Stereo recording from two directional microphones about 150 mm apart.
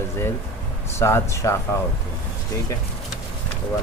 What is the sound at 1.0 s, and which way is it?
Speech, 20° left (ahead or behind).